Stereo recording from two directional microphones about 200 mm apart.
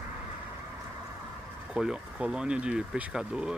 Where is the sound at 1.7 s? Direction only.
5° right (ahead or behind).